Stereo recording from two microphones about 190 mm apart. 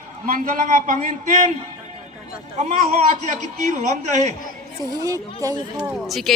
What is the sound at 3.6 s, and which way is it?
Speech, 40° right (ahead or behind).